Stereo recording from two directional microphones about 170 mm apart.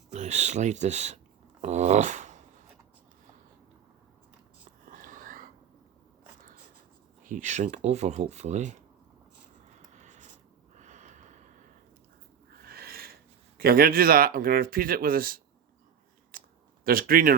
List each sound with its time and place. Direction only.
0.1 s speech: 40° right (ahead or behind)
4.9 s whispering: 50° right (ahead or behind)
7.3 s speech: 45° right (ahead or behind)
9.9 s writing: 45° right (ahead or behind)
10.8 s snort: 45° right (ahead or behind)
12.6 s owl: 60° right (ahead or behind)
13.6 s speech: 60° right (ahead or behind)
16.3 s chewing: 55° right (ahead or behind)
16.8 s speech: 60° right (ahead or behind)